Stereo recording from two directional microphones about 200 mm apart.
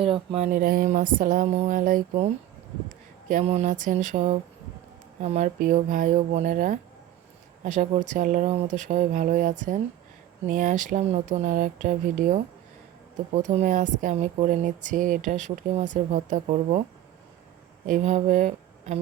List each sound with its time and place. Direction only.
0.0 s speech: 25° right (ahead or behind)
17.8 s speech: 40° right (ahead or behind)